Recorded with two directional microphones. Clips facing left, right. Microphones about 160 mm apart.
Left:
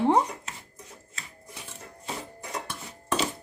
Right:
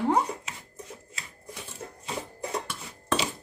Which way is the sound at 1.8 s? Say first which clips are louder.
Right 5 dB; 30° right (ahead or behind).